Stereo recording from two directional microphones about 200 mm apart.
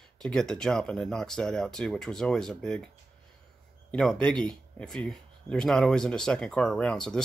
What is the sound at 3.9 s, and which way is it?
Speech, 5° left (ahead or behind).